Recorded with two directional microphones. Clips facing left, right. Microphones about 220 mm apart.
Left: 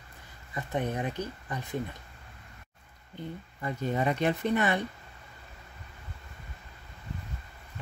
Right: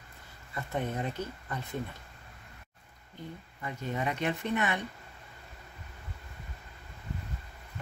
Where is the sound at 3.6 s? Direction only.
35° left (ahead or behind).